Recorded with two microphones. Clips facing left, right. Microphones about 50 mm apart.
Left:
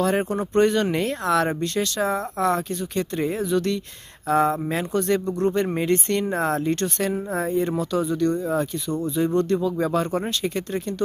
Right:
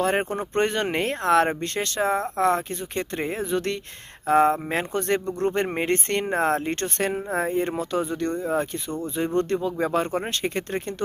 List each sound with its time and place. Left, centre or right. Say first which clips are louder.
0.0 s speech: left 1 dB; right